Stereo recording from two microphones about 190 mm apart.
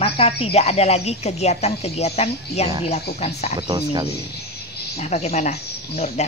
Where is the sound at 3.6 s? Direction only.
20° right (ahead or behind).